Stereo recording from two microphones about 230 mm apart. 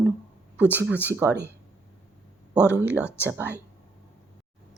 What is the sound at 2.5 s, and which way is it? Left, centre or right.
Speech, centre.